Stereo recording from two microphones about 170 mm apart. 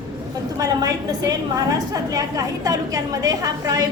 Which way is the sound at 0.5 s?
20° right (ahead or behind).